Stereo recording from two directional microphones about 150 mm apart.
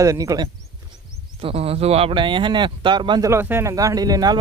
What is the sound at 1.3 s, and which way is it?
Speech, 40° right (ahead or behind).